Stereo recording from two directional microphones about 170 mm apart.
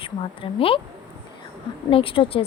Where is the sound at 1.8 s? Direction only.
30° left (ahead or behind).